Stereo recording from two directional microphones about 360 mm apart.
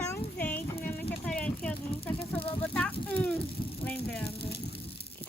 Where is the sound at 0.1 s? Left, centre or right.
Centre.